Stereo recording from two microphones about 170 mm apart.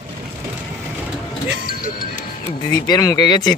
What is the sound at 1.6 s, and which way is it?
Music, 55° left (ahead or behind).